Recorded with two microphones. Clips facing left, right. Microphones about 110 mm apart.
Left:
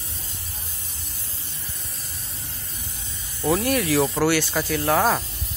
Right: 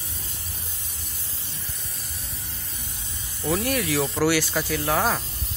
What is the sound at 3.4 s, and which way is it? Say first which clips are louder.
Speech: left 3 dB; 15° left (ahead or behind).